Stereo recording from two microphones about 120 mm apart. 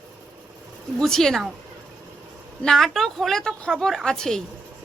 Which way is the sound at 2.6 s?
5° left (ahead or behind).